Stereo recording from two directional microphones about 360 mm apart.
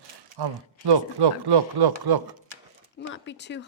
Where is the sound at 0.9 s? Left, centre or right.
Right.